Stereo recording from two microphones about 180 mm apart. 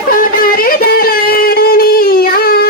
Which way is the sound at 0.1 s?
50° left (ahead or behind).